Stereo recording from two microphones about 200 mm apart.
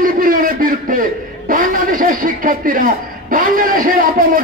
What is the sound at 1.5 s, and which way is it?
A man's voice, 45° right (ahead or behind).